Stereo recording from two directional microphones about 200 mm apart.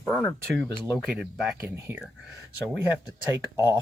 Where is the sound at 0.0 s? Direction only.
10° left (ahead or behind).